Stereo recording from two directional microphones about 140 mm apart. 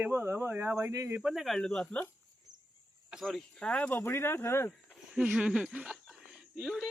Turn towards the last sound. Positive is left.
turn(degrees=-5)  # may be behind; listen again after turning